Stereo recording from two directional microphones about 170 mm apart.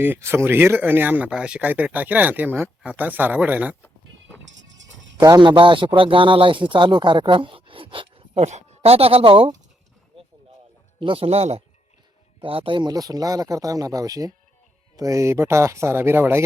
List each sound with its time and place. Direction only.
0.0 s speech: 15° right (ahead or behind)
4.4 s music: 90° right
5.1 s a man's voice: 25° right (ahead or behind)
11.0 s a man's voice: 35° right (ahead or behind); by 16.4 s 15° right (ahead or behind)